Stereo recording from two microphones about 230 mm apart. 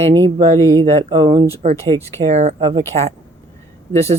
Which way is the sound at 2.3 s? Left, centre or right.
Right.